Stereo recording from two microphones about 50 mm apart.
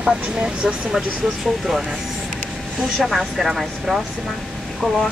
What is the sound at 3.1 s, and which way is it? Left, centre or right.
Speech, centre.